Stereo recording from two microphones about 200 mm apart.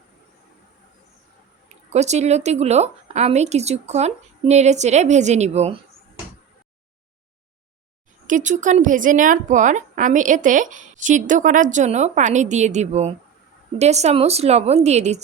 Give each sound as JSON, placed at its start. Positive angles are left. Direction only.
{"t": 1.9, "sound": "a woman's voice", "side_deg": -35}
{"t": 8.3, "sound": "a woman's voice", "side_deg": -40}